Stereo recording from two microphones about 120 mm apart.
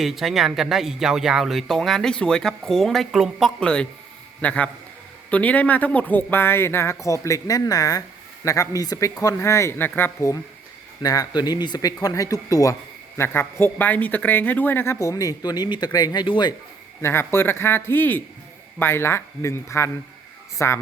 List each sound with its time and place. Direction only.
0.0 s a man's voice: centre (ahead or behind); by 10.3 s 20° left (ahead or behind)
11.0 s speech: 30° left (ahead or behind)
13.1 s speech: 20° left (ahead or behind)
14.9 s speech: 30° left (ahead or behind)
17.0 s speech: 20° left (ahead or behind)